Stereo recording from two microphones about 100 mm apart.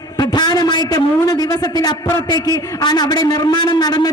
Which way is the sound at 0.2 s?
45° left (ahead or behind).